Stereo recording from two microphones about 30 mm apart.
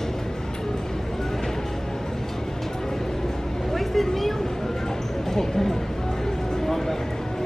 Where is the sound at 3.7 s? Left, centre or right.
Centre.